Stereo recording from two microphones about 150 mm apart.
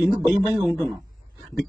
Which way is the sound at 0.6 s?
Centre (ahead or behind).